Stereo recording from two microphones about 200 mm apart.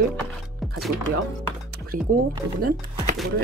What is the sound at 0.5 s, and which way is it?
Music, centre (ahead or behind).